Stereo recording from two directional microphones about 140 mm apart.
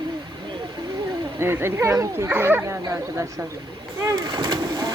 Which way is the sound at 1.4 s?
15° right (ahead or behind).